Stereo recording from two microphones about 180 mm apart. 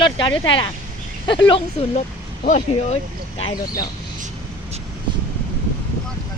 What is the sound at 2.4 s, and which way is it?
Speech, 40° left (ahead or behind).